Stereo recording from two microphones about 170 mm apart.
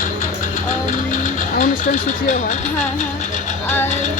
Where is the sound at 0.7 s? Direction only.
45° left (ahead or behind).